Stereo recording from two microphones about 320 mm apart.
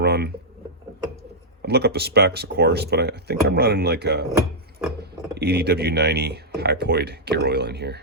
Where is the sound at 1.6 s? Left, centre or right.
Right.